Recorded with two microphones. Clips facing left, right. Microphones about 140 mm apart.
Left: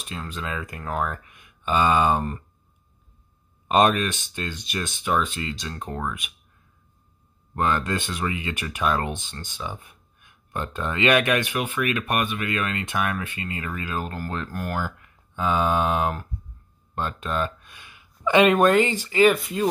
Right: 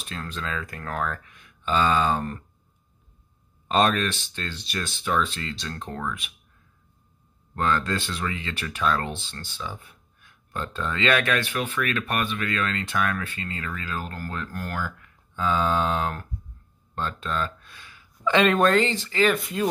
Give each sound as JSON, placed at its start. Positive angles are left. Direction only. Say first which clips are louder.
{"t": 0.0, "sound": "speech", "louder": "left 1 dB", "side_deg": 10}
{"t": 3.6, "sound": "speech", "louder": "left 3 dB", "side_deg": 15}
{"t": 7.5, "sound": "speech", "louder": "left 1 dB", "side_deg": 15}
{"t": 19.3, "sound": "speech", "louder": "left 1 dB", "side_deg": 0}